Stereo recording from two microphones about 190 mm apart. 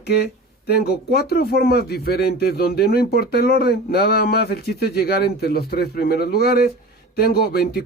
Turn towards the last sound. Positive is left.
turn(degrees=55)  # may be behind; listen again after turning